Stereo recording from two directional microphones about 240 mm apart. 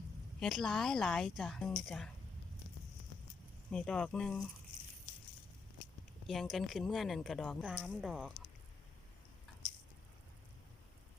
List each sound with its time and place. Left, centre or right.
0.3 s a woman's voice: centre
3.7 s a woman's voice: centre
6.2 s a woman's voice: centre